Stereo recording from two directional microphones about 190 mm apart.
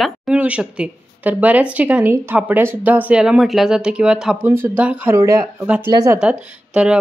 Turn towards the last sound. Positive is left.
turn(degrees=-5)  # may be behind; listen again after turning